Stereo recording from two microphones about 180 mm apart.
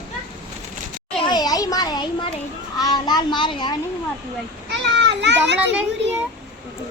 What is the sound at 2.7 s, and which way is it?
A child's voice, 20° left (ahead or behind).